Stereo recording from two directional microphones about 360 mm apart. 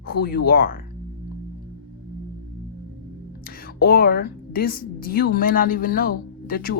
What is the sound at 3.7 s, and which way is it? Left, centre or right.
Speech, left.